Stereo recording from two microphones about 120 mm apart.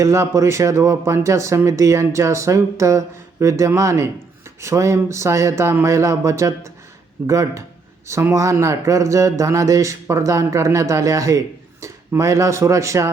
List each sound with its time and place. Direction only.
0.0 s speech: 25° right (ahead or behind)